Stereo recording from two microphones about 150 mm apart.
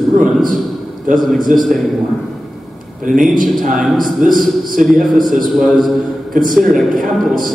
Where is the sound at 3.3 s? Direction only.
65° right (ahead or behind).